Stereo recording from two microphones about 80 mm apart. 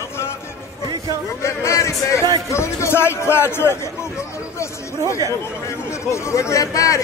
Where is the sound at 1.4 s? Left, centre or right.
Left.